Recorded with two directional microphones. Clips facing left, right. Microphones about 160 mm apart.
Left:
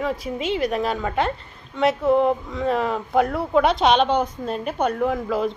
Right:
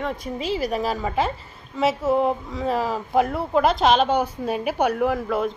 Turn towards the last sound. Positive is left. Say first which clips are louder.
# even
turn(degrees=0)  # may be behind; listen again after turning